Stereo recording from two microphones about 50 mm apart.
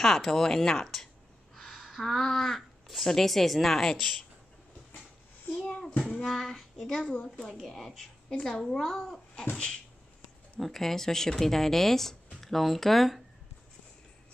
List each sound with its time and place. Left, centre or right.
0.0 s speech: centre
5.7 s a child's voice: left
6.3 s child singing: centre
6.9 s speech: centre
10.6 s speech: centre